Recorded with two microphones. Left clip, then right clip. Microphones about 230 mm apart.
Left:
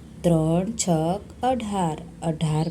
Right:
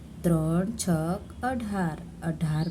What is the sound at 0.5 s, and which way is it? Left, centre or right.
A woman's voice, centre.